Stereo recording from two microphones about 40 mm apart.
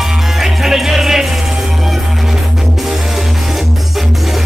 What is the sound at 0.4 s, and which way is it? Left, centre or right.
Music, centre.